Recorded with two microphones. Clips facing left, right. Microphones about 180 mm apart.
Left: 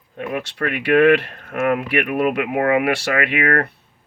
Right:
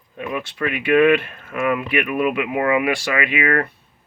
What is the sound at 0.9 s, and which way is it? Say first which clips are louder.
Speech: left 1 dB; 70° left (ahead or behind).